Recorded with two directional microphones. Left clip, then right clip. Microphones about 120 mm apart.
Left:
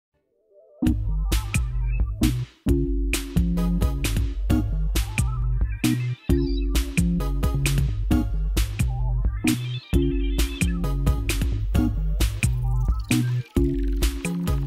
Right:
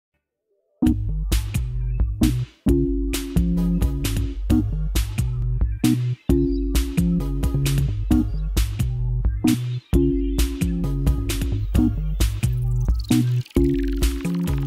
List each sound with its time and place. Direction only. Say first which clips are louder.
0.7 s music: right 4 dB; centre (ahead or behind)
3.5 s music: right 3 dB; 10° right (ahead or behind)
3.8 s music: right 1 dB; centre (ahead or behind)
10.8 s music: right 2 dB; 10° right (ahead or behind)